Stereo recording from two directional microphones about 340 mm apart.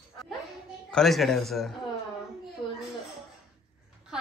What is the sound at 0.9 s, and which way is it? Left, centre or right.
Speech, centre.